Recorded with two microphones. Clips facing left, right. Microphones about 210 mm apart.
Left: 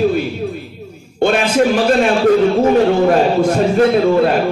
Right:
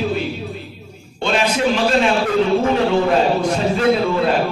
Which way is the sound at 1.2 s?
50° left (ahead or behind).